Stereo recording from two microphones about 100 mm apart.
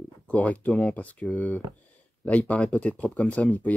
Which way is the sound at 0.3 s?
15° left (ahead or behind).